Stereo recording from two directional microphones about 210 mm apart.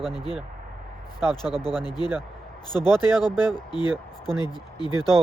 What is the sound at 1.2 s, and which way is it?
Speech, 20° left (ahead or behind).